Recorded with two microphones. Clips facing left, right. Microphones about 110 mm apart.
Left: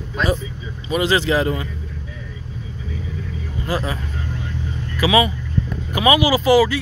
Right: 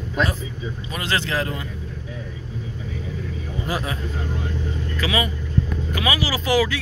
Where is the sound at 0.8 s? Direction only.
10° left (ahead or behind).